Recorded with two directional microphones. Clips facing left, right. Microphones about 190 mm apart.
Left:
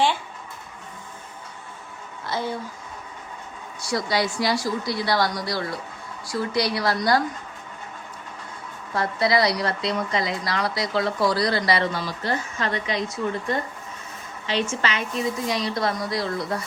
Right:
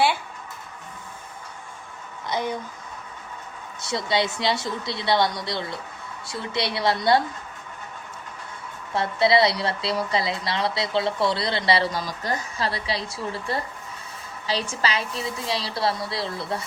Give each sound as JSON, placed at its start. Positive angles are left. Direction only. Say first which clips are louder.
{"t": 2.2, "sound": "speech", "louder": "right 1 dB", "side_deg": -15}
{"t": 3.8, "sound": "a woman's voice", "louder": "even", "side_deg": -25}
{"t": 9.0, "sound": "a woman's voice", "louder": "right 2 dB", "side_deg": -25}